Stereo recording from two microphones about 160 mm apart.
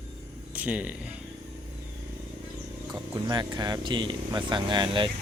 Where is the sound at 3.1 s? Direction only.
25° right (ahead or behind).